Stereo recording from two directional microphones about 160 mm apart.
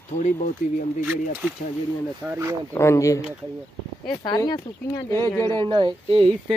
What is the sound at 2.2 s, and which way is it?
Speech, 15° right (ahead or behind).